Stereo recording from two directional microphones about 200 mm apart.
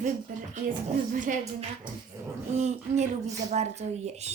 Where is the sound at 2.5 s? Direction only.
35° right (ahead or behind).